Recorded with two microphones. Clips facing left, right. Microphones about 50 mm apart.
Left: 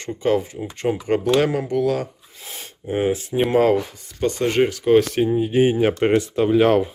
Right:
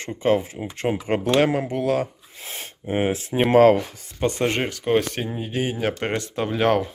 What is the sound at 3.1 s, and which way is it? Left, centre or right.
Speech, right.